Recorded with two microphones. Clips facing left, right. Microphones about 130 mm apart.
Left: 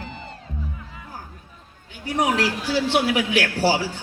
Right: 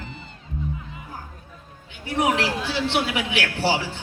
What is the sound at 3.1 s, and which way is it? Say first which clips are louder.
Speech: left 4 dB; 40° left (ahead or behind).